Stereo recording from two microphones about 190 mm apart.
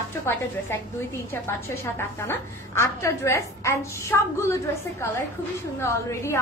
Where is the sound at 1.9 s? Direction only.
15° left (ahead or behind).